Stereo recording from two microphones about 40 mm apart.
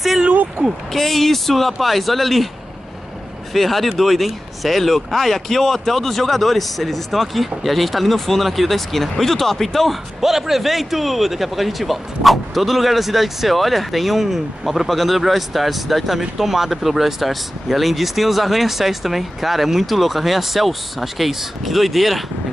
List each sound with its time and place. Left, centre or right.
0.6 s speech: right
0.9 s speech: centre
3.5 s speech: centre
10.2 s speech: centre